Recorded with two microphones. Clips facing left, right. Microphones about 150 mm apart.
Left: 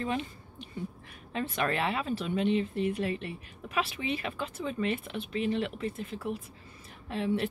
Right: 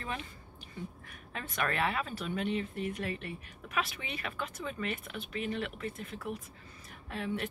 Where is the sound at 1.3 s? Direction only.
30° left (ahead or behind).